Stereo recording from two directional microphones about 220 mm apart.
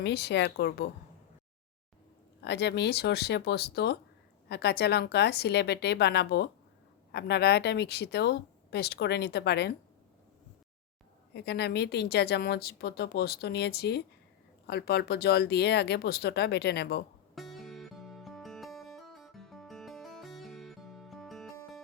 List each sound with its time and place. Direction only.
0.0 s speech: 50° left (ahead or behind)
2.4 s speech: 50° left (ahead or behind)
11.3 s speech: 50° left (ahead or behind)
17.3 s music: centre (ahead or behind)